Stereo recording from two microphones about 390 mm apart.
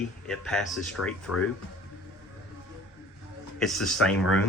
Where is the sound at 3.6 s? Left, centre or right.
Centre.